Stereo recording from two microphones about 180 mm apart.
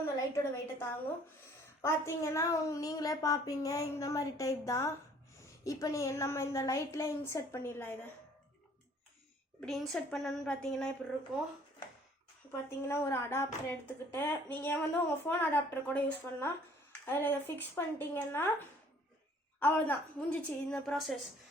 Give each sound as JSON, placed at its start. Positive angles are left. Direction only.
{"t": 0.0, "sound": "a sound", "side_deg": 15}
{"t": 1.8, "sound": "a woman's voice", "side_deg": 15}
{"t": 9.6, "sound": "a woman's voice", "side_deg": 0}
{"t": 12.5, "sound": "a woman's voice", "side_deg": 15}
{"t": 19.5, "sound": "a woman's voice", "side_deg": 10}